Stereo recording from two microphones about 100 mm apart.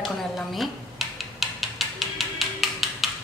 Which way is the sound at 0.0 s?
Centre (ahead or behind).